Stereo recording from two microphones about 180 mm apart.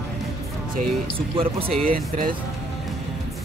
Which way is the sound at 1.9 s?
55° right (ahead or behind).